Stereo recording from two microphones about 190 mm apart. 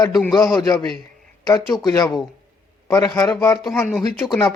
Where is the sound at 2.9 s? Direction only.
15° left (ahead or behind).